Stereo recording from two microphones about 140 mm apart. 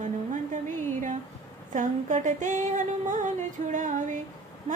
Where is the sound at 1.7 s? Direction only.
65° right (ahead or behind).